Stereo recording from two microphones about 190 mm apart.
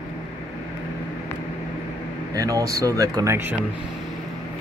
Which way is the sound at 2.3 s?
15° right (ahead or behind).